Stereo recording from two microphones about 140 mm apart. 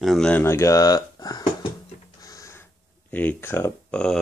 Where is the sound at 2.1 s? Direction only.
25° left (ahead or behind).